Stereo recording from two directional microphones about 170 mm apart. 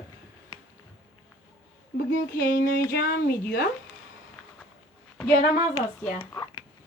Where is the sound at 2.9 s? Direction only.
60° left (ahead or behind).